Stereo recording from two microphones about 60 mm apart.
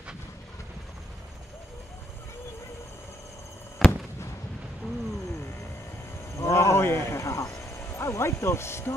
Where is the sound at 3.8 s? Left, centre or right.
Left.